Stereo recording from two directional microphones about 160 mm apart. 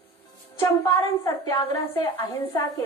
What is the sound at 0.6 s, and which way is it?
A woman's voice, 20° left (ahead or behind).